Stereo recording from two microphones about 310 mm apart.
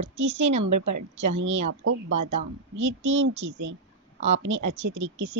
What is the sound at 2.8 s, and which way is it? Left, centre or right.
A woman's voice, right.